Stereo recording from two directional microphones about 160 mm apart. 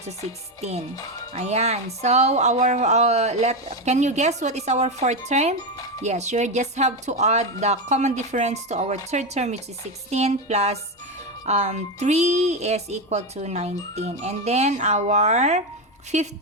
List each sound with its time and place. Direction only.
0.0 s speech: 45° right (ahead or behind)